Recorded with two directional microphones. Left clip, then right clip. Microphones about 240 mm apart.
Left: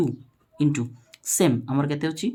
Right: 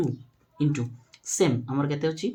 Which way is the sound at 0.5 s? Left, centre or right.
Left.